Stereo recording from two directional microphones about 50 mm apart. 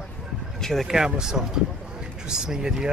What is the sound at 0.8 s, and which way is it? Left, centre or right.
Speech, centre.